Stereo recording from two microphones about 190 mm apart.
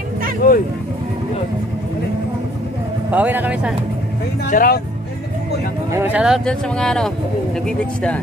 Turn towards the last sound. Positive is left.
turn(degrees=5)  # may be behind; listen again after turning